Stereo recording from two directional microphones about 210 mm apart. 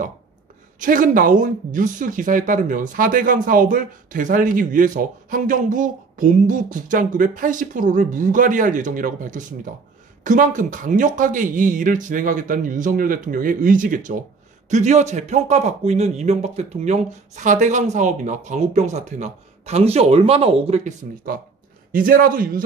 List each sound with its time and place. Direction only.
0.7 s speech: 40° right (ahead or behind)